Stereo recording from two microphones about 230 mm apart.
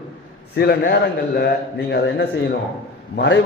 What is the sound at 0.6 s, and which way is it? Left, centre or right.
A man's voice, left.